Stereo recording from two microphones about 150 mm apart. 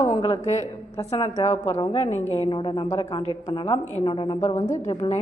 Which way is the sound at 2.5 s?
35° left (ahead or behind).